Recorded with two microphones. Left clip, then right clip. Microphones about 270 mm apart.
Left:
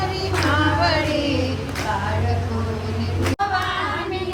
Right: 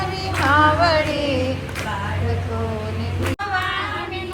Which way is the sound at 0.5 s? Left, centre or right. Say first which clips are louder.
Right 6 dB; centre.